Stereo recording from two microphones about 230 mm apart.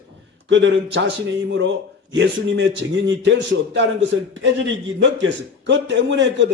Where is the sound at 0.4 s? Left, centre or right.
Right.